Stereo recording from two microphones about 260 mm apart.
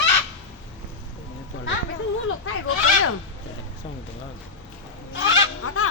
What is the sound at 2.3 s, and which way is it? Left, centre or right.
Goat, left.